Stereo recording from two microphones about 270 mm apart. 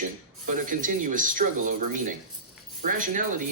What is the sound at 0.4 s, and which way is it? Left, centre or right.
Speech, right.